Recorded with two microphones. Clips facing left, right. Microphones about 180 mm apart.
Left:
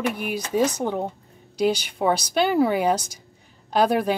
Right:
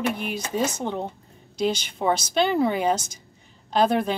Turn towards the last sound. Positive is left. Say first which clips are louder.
# left 1 dB
turn(degrees=10)  # may be behind; listen again after turning